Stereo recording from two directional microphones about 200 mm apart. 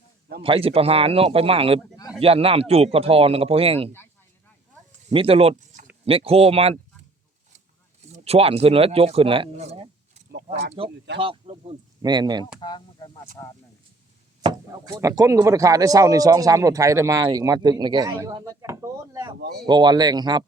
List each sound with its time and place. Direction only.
0.4 s a man's voice: 30° right (ahead or behind)
5.1 s a man's voice: 30° right (ahead or behind)
8.1 s a man's voice: 30° right (ahead or behind)
10.8 s speech: 60° right (ahead or behind)
11.2 s a man's voice: 30° right (ahead or behind)
12.5 s speech: 20° left (ahead or behind)
14.8 s a man's voice: 15° right (ahead or behind)